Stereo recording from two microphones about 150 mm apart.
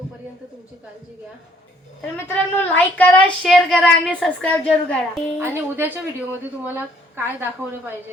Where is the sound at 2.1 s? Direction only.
15° left (ahead or behind).